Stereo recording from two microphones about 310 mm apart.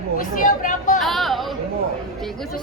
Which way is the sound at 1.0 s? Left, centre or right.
Centre.